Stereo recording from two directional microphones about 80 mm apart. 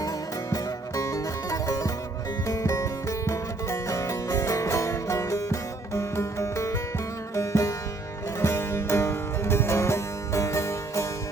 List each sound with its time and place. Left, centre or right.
0.5 s music: left